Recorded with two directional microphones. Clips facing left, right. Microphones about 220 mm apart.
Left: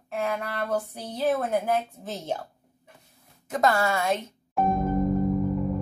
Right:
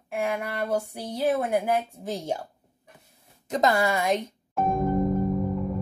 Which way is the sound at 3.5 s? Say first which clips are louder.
Right 1 dB; 20° right (ahead or behind).